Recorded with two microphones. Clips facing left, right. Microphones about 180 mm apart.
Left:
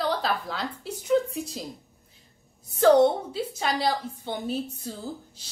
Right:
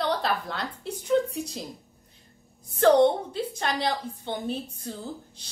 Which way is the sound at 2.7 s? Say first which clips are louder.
Left 1 dB; 5° left (ahead or behind).